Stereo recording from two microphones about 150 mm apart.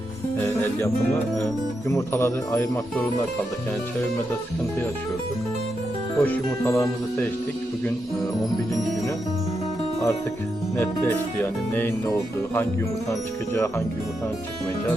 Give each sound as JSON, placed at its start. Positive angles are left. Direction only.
{"t": 0.3, "sound": "music", "side_deg": 15}
{"t": 1.9, "sound": "speech", "side_deg": 15}
{"t": 6.1, "sound": "speech", "side_deg": 15}
{"t": 10.8, "sound": "speech", "side_deg": 15}